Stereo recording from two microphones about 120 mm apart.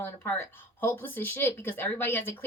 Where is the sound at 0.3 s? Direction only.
15° left (ahead or behind).